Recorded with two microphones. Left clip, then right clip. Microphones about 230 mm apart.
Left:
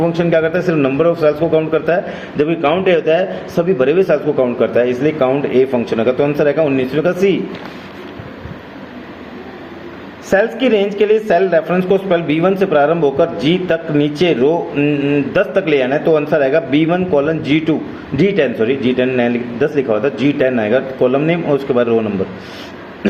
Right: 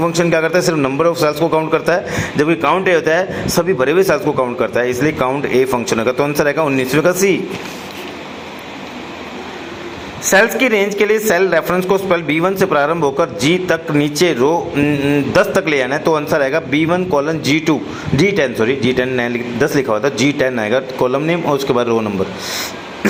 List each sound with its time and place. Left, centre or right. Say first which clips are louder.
0.1 s a man's voice: even; centre
10.2 s a man's voice: right 2 dB; centre